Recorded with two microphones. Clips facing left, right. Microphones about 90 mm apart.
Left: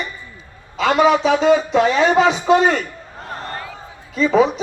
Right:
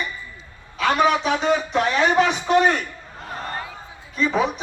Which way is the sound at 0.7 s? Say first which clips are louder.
Left 3 dB; 90° left.